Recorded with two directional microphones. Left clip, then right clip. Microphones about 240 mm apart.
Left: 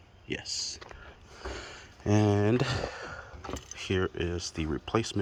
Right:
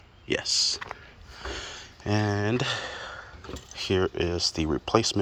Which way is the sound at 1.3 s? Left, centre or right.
Left.